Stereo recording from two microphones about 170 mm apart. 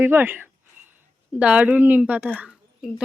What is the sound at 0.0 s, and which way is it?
Speech, 10° right (ahead or behind).